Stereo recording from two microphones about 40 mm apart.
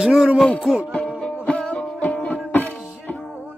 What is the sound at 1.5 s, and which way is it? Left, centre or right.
Music, left.